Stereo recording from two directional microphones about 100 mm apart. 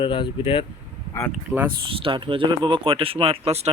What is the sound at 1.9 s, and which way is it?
Speech, 60° right (ahead or behind).